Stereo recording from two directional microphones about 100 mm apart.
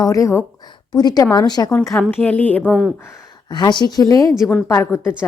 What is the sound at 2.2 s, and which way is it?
Speech, 15° left (ahead or behind).